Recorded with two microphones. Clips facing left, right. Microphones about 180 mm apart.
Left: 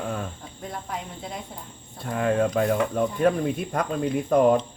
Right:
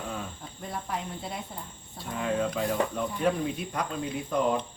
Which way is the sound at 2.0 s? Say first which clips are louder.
Left 6 dB; 55° left (ahead or behind).